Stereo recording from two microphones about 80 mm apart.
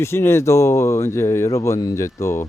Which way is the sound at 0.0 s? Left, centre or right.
Left.